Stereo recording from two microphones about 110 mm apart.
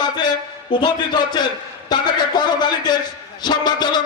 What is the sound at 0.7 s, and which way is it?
Speech, 45° left (ahead or behind).